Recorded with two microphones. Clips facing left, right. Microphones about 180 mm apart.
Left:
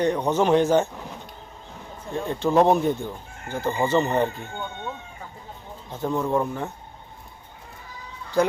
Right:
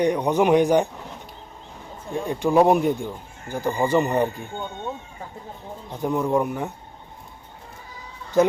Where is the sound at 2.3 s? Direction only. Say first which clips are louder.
Right 1 dB; 15° right (ahead or behind).